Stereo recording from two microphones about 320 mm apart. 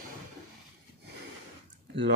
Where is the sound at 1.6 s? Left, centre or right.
Right.